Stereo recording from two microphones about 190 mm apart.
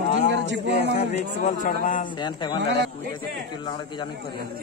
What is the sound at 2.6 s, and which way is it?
Speech, 65° right (ahead or behind).